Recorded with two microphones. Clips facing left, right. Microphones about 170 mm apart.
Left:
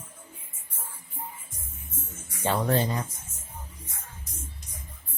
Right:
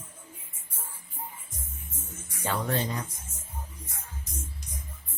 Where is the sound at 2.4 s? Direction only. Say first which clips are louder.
Left 4 dB; 35° left (ahead or behind).